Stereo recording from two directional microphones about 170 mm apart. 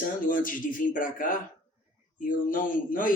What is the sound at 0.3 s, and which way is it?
A man's voice, 50° left (ahead or behind).